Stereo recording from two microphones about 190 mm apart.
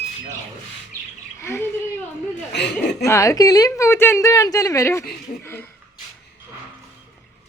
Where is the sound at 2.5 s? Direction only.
65° left (ahead or behind).